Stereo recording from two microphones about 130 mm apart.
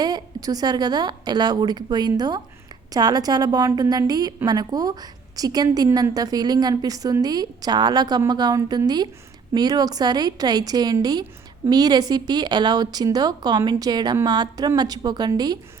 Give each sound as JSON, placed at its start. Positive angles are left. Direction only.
{"t": 0.0, "sound": "a woman's voice", "side_deg": -30}